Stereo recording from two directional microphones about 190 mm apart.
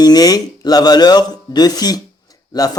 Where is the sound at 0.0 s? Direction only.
20° left (ahead or behind).